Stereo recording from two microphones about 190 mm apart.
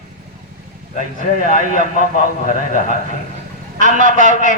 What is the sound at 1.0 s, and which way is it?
A man's voice, 40° left (ahead or behind).